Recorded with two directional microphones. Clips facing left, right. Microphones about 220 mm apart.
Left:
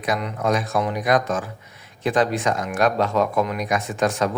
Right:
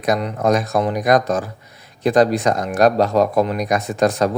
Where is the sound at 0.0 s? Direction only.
40° right (ahead or behind).